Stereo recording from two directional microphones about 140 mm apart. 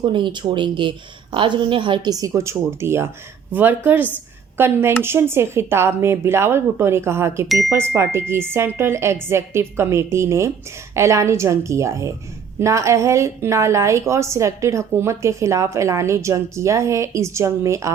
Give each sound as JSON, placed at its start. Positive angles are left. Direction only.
{"t": 0.0, "sound": "speech", "side_deg": -35}
{"t": 7.4, "sound": "speech", "side_deg": 0}
{"t": 7.7, "sound": "a woman's voice", "side_deg": -20}